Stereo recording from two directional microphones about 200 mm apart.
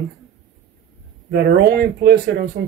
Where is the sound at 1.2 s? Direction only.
50° right (ahead or behind).